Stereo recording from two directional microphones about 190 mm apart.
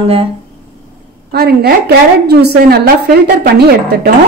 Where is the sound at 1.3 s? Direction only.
55° right (ahead or behind).